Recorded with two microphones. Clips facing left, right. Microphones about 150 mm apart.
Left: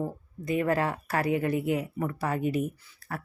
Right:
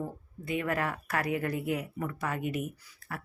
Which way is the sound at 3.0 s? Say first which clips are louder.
Left 4 dB; 35° left (ahead or behind).